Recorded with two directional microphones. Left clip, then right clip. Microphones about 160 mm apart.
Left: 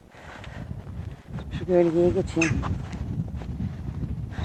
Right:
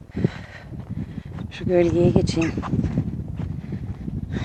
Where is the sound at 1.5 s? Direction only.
15° right (ahead or behind).